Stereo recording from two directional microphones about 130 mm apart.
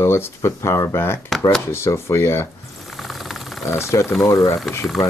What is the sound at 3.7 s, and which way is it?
Speech, 20° left (ahead or behind).